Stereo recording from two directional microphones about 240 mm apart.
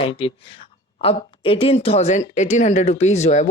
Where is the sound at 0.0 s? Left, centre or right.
Left.